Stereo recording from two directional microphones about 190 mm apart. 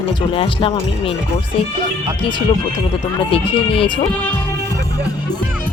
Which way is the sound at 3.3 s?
30° left (ahead or behind).